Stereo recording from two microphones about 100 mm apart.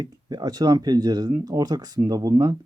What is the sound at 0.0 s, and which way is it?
Speech, 45° right (ahead or behind).